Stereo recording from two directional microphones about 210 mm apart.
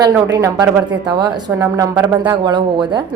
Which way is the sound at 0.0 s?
15° right (ahead or behind).